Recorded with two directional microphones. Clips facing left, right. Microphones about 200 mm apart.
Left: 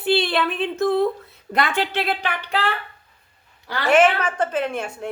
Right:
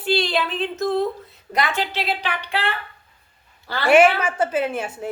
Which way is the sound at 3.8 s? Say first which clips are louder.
Right 2 dB; 10° right (ahead or behind).